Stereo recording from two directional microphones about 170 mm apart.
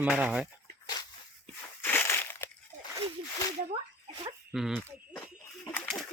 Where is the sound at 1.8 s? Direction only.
15° left (ahead or behind).